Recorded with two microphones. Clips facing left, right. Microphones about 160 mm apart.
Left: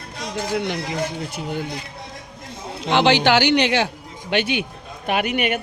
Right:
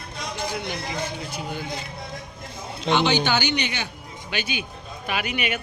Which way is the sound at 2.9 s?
90° left.